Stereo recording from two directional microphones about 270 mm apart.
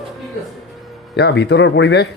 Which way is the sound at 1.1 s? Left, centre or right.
Left.